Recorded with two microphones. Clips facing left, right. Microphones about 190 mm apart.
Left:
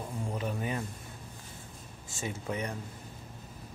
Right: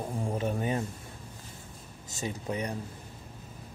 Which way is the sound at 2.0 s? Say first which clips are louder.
Right 2 dB; 40° right (ahead or behind).